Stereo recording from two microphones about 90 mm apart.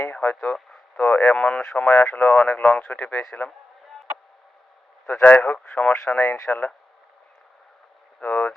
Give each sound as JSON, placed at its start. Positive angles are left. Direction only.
{"t": 0.1, "sound": "a sound", "side_deg": 20}
{"t": 0.9, "sound": "a man's voice", "side_deg": 20}
{"t": 1.9, "sound": "speech", "side_deg": 20}
{"t": 5.2, "sound": "a man's voice", "side_deg": 15}
{"t": 6.1, "sound": "speech", "side_deg": 25}
{"t": 8.2, "sound": "a sound", "side_deg": 20}